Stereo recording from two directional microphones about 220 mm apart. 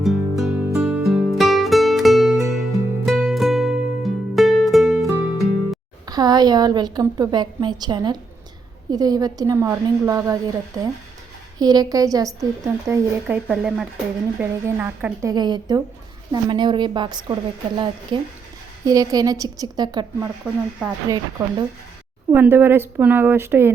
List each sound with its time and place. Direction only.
0.0 s music: centre (ahead or behind)
6.1 s a woman's voice: 20° right (ahead or behind)
20.4 s speech: 5° right (ahead or behind)
22.3 s a woman's voice: 10° right (ahead or behind)